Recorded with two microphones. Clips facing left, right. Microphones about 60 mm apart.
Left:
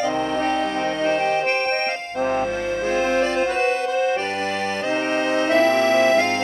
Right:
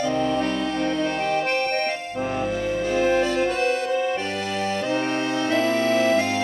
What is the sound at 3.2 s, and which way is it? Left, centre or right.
Music, left.